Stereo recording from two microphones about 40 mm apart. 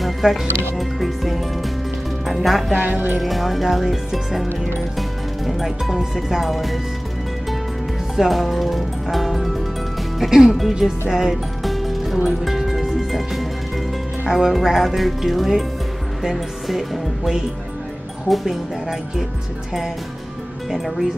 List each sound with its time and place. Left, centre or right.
0.0 s music: centre
2.2 s speech: centre
2.7 s speech: right
3.2 s speech: centre
8.2 s speech: centre
10.2 s music: centre
10.7 s speech: centre
12.4 s music: centre
14.3 s speech: centre
20.7 s speech: centre